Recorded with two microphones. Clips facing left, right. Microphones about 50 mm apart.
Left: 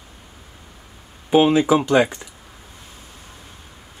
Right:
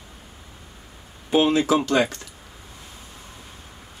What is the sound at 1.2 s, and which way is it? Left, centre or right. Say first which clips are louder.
Speech: left 4 dB; centre.